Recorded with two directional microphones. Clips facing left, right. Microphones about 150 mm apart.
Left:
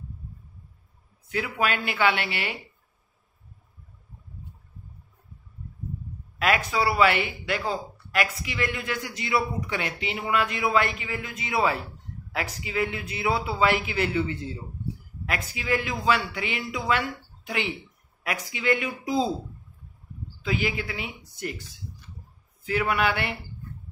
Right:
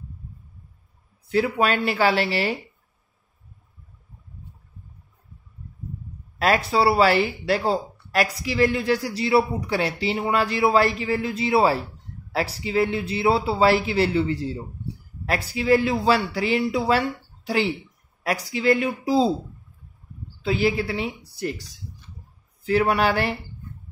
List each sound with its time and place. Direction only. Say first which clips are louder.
1.3 s speech: right 6 dB; 35° right (ahead or behind)
6.3 s speech: right 4 dB; 35° right (ahead or behind)
20.4 s speech: right 6 dB; 35° right (ahead or behind)